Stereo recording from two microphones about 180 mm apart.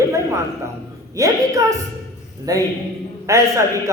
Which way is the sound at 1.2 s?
20° right (ahead or behind).